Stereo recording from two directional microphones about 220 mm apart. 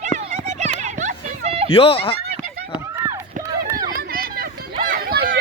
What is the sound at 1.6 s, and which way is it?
Speech, 25° left (ahead or behind).